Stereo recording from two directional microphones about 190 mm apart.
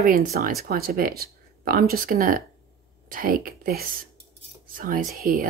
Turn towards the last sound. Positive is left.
turn(degrees=-50)  # may be behind; listen again after turning